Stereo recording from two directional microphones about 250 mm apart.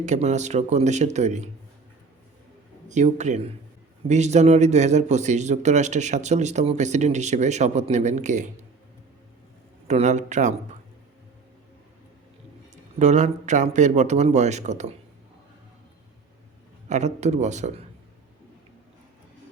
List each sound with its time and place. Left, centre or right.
0.0 s a man's voice: right
2.9 s a man's voice: right
9.8 s a man's voice: right
12.7 s a man's voice: right
16.9 s a man's voice: right